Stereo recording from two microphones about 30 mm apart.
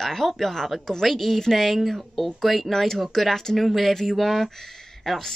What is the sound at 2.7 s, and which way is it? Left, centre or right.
Speech, centre.